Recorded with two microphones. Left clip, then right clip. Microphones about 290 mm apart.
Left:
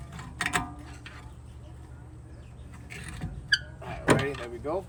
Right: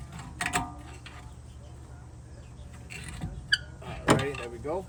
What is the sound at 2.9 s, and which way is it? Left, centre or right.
Vehicle, centre.